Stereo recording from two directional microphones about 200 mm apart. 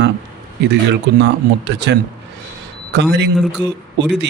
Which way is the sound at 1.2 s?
60° right (ahead or behind).